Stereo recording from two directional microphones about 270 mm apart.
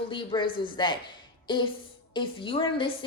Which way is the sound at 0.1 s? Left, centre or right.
Centre.